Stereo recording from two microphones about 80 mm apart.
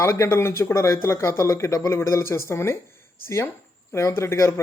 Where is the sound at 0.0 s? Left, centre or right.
Left.